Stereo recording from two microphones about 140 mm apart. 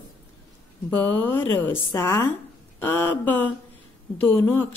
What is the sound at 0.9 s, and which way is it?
Speech, 15° left (ahead or behind).